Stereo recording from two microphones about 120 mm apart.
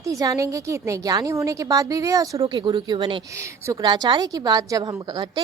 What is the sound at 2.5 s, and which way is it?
A woman's voice, 40° right (ahead or behind).